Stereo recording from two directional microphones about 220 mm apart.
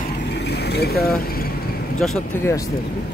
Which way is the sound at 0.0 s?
50° left (ahead or behind).